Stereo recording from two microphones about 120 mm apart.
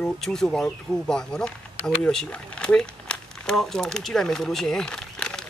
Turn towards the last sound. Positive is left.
turn(degrees=5)  # may be behind; listen again after turning